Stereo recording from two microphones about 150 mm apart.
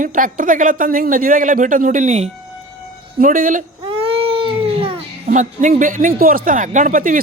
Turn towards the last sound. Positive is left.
turn(degrees=-60)  # may be behind; listen again after turning